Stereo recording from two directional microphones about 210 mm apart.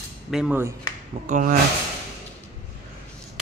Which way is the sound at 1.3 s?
40° right (ahead or behind).